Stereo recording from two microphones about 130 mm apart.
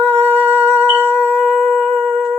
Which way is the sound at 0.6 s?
55° right (ahead or behind).